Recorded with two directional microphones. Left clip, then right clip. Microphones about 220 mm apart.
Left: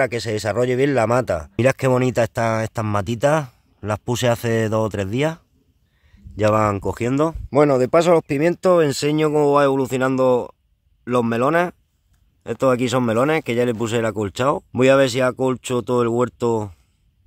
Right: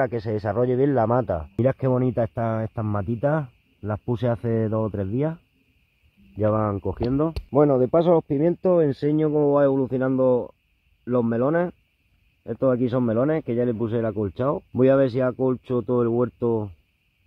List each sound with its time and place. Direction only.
0.0 s speech: 20° left (ahead or behind)
9.2 s speech: 25° left (ahead or behind)
9.5 s speech: 10° left (ahead or behind)
16.4 s speech: 25° left (ahead or behind)